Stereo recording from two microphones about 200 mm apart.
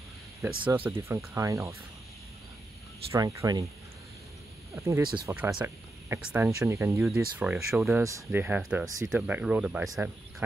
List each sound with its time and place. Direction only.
0.4 s speech: 15° right (ahead or behind)
3.1 s speech: 15° right (ahead or behind)
4.7 s speech: 15° right (ahead or behind)